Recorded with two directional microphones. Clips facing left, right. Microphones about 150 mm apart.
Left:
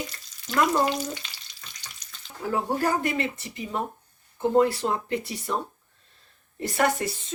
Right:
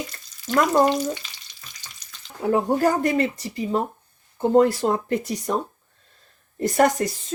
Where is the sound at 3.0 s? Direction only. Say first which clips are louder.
Right 6 dB; 40° right (ahead or behind).